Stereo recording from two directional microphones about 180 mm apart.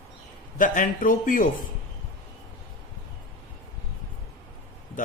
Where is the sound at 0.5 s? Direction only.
45° left (ahead or behind).